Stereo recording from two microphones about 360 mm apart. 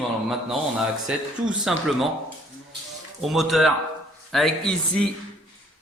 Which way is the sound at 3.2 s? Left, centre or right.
Centre.